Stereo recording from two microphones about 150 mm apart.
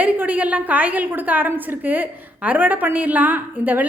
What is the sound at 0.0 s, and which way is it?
A woman's voice, 10° right (ahead or behind).